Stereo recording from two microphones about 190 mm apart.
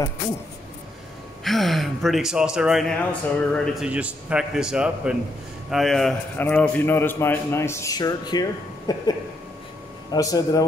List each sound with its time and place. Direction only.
1.4 s a man's voice: centre (ahead or behind); by 9.1 s 20° left (ahead or behind)
10.1 s speech: 20° left (ahead or behind)